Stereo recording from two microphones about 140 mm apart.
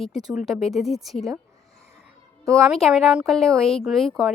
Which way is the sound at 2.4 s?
20° right (ahead or behind).